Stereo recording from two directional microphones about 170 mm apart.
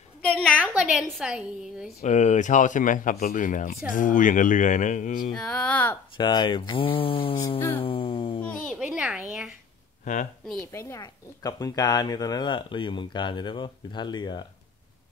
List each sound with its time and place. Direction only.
0.6 s a sound: 5° right (ahead or behind)
1.0 s a woman's voice: centre (ahead or behind)
2.0 s speech: 45° left (ahead or behind)
5.3 s speech: 5° left (ahead or behind)
6.1 s speech: 25° left (ahead or behind)
7.8 s music: 30° left (ahead or behind)
8.7 s a woman's voice: 5° right (ahead or behind)
10.1 s speech: 45° left (ahead or behind)
10.7 s speech: 20° left (ahead or behind)